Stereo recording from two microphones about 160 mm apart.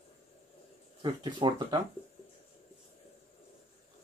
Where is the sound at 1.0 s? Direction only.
30° right (ahead or behind).